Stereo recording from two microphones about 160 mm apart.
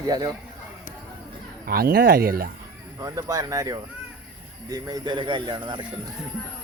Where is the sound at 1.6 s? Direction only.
70° right (ahead or behind).